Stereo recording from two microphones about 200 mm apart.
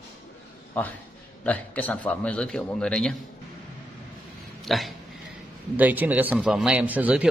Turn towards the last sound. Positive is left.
turn(degrees=-5)  # may be behind; listen again after turning